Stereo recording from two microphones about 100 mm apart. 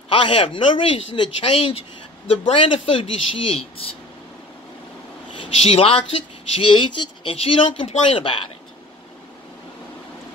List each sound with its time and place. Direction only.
0.1 s speech: 65° left (ahead or behind)
5.4 s speech: 70° left (ahead or behind)
6.7 s speech: 55° left (ahead or behind)
7.3 s speech: 65° left (ahead or behind)